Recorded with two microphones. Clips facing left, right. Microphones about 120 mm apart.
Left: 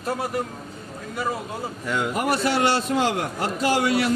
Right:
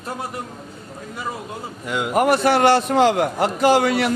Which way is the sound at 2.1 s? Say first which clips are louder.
Right 8 dB; 55° right (ahead or behind).